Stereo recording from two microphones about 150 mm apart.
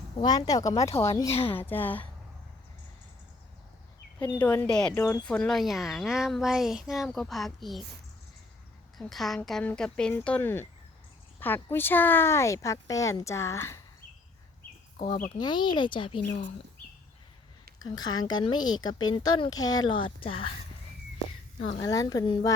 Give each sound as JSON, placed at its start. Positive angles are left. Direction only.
{"t": 0.2, "sound": "speech", "side_deg": 25}
{"t": 1.3, "sound": "speech", "side_deg": 40}
{"t": 1.5, "sound": "speech", "side_deg": 15}
{"t": 4.2, "sound": "speech", "side_deg": 25}
{"t": 4.4, "sound": "speech", "side_deg": 10}
{"t": 9.0, "sound": "speech", "side_deg": 0}
{"t": 14.9, "sound": "speech", "side_deg": 60}
{"t": 15.4, "sound": "speech", "side_deg": 30}
{"t": 17.8, "sound": "speech", "side_deg": 25}
{"t": 21.8, "sound": "speech", "side_deg": 25}